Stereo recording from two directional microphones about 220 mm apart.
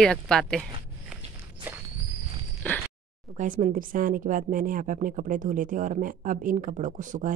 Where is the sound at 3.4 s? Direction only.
35° right (ahead or behind).